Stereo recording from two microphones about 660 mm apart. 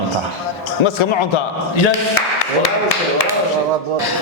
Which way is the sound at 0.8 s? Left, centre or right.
Left.